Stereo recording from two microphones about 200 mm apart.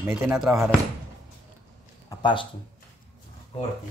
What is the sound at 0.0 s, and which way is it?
Speech, 10° right (ahead or behind).